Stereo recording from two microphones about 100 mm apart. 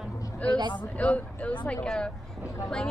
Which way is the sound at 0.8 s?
15° left (ahead or behind).